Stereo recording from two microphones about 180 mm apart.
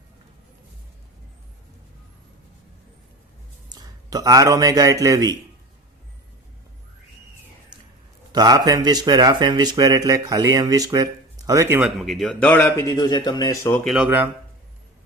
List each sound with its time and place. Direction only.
3.7 s a man's voice: 20° right (ahead or behind)
8.3 s speech: 20° right (ahead or behind)
11.8 s speech: centre (ahead or behind)
13.8 s speech: 5° right (ahead or behind)